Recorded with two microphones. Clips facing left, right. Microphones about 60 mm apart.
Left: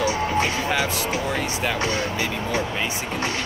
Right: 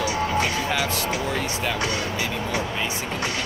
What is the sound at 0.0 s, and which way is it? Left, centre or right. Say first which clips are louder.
Music: left 1 dB; left.